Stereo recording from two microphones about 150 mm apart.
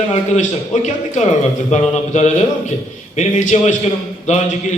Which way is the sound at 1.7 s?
50° left (ahead or behind).